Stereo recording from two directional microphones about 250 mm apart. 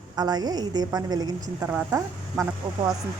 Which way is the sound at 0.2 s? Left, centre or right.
Centre.